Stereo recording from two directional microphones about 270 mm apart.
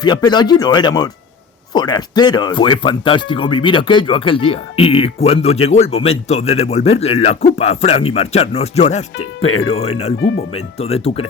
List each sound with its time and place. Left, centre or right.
0.0 s speech: centre
9.4 s speech: left
10.5 s speech: left